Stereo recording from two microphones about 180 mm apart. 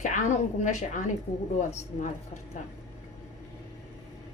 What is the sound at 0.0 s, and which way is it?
A woman's voice, 40° left (ahead or behind).